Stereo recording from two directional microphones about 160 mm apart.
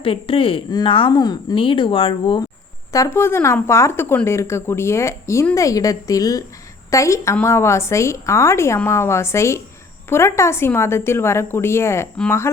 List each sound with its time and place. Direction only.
0.0 s speech: 35° left (ahead or behind)
2.9 s a woman's voice: 20° left (ahead or behind)